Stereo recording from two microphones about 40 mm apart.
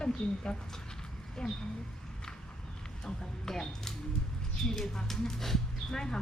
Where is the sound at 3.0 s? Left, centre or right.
Centre.